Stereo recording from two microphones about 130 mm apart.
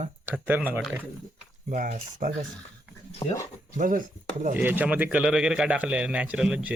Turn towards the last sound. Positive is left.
turn(degrees=-5)  # may be behind; listen again after turning